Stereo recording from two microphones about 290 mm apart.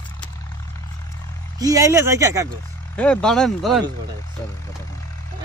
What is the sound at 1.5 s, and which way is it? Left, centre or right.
Speech, centre.